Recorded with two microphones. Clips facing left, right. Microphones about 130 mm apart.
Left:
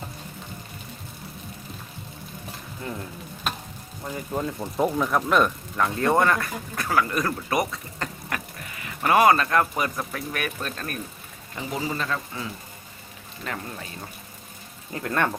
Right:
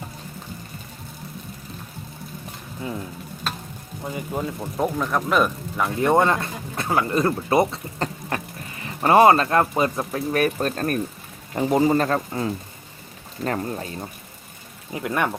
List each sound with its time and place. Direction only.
4.0 s speech: 10° right (ahead or behind); by 14.0 s 35° right (ahead or behind)
14.9 s speech: 15° right (ahead or behind)